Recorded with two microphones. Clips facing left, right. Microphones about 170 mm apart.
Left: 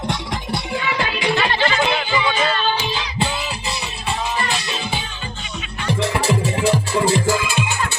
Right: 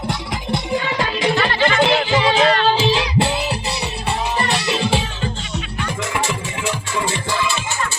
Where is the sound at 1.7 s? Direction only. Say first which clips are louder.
Right 4 dB; 75° right (ahead or behind).